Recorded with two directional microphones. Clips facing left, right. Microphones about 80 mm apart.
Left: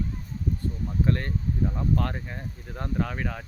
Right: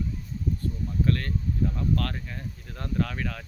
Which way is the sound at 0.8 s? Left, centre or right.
Left.